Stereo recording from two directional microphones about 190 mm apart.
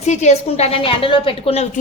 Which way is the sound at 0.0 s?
35° left (ahead or behind).